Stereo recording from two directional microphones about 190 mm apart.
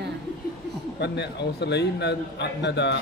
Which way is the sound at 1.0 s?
65° left (ahead or behind).